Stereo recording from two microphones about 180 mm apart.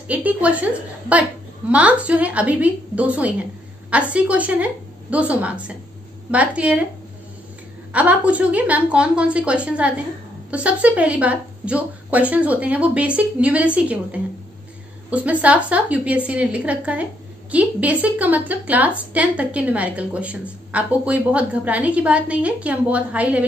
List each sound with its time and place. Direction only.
0.1 s a woman's voice: 10° right (ahead or behind)
7.9 s a woman's voice: 5° right (ahead or behind)